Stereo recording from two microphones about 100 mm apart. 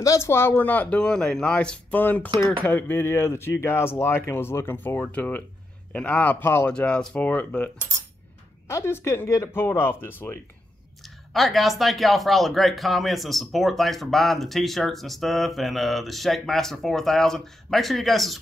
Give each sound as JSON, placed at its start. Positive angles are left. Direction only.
{"t": 0.0, "sound": "speech", "side_deg": 30}
{"t": 8.6, "sound": "speech", "side_deg": 25}
{"t": 11.0, "sound": "speech", "side_deg": 0}